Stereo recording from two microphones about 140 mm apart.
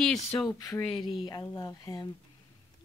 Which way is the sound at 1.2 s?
30° left (ahead or behind).